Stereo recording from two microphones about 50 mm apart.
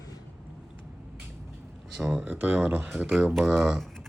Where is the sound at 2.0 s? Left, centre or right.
Centre.